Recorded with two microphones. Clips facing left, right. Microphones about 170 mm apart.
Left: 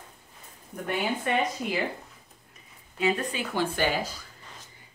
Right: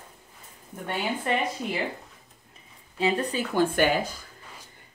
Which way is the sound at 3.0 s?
30° right (ahead or behind).